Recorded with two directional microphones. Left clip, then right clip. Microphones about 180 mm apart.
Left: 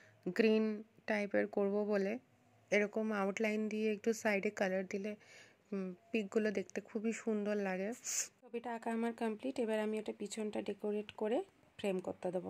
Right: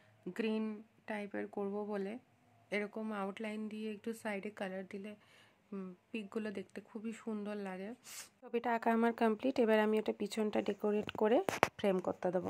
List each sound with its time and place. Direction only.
0.3 s speech: 10° left (ahead or behind)
0.7 s speech: 25° left (ahead or behind)
8.5 s speech: 25° right (ahead or behind)